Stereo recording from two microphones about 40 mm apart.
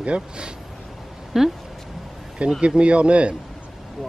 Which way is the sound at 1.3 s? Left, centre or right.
Centre.